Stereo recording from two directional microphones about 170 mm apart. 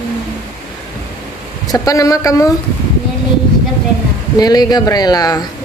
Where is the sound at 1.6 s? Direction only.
20° left (ahead or behind).